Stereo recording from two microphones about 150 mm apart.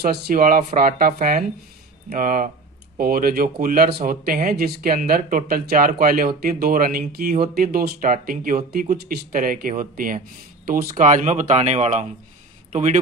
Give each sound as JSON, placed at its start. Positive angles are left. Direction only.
{"t": 0.0, "sound": "a man's voice", "side_deg": -80}